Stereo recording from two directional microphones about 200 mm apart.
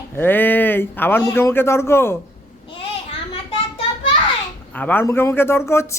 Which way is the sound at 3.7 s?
30° left (ahead or behind).